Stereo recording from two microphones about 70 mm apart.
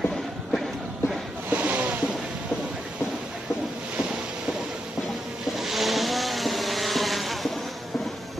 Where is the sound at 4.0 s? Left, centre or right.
Centre.